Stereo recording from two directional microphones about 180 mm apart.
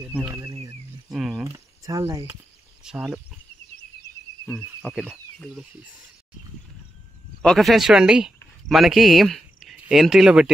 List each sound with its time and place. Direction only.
0.0 s speech: 10° right (ahead or behind)
0.4 s a sound: 25° right (ahead or behind)
1.0 s cricket: centre (ahead or behind)
1.4 s a sound: 20° right (ahead or behind)
2.8 s speech: 5° right (ahead or behind)
4.5 s speech: 5° left (ahead or behind)
7.4 s speech: centre (ahead or behind)